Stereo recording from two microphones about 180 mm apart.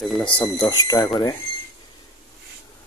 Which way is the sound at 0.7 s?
20° left (ahead or behind).